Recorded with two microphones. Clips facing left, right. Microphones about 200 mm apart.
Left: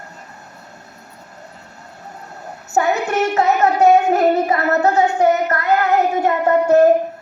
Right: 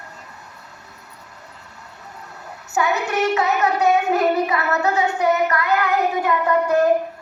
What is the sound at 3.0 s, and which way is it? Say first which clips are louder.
Music: left 3 dB; 45° left (ahead or behind).